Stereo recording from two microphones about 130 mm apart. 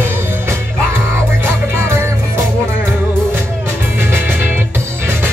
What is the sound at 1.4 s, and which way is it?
Music, 20° right (ahead or behind).